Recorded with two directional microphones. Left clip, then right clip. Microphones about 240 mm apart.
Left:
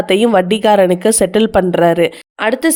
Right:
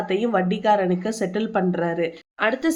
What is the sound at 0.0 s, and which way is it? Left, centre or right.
A woman's voice, left.